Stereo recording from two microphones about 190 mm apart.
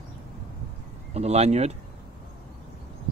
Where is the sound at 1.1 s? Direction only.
35° right (ahead or behind).